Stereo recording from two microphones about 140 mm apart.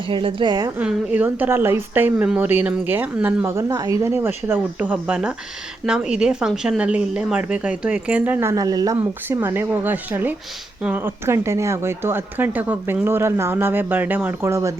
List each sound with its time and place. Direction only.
0.1 s a woman's voice: 40° right (ahead or behind)
0.8 s speech: 10° right (ahead or behind); by 9.0 s 25° right (ahead or behind)
9.0 s speech: 15° right (ahead or behind)